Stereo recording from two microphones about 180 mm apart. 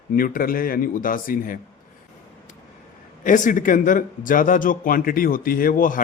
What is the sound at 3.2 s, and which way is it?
Speech, 45° left (ahead or behind).